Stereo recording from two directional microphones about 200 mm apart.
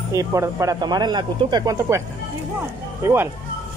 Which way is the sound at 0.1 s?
15° right (ahead or behind).